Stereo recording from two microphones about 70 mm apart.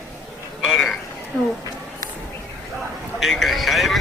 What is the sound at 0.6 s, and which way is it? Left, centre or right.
Speech, centre.